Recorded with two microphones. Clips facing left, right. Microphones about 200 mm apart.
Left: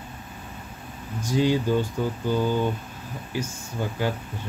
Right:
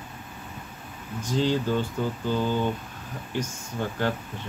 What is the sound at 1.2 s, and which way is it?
Speech, 10° left (ahead or behind).